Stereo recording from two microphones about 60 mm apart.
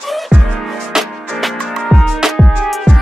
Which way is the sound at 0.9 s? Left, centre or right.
Centre.